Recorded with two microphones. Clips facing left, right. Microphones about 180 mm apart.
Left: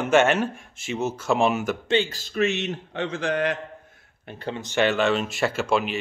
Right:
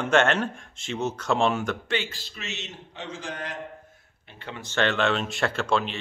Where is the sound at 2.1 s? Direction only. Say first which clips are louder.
Left 15 dB; 50° left (ahead or behind); by 3.5 s 70° left (ahead or behind).